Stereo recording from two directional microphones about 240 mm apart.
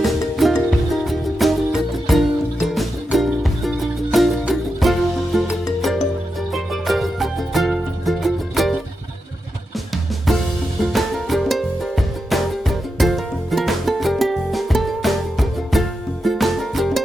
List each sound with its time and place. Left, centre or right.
0.0 s music: centre
6.5 s music: centre
9.7 s music: centre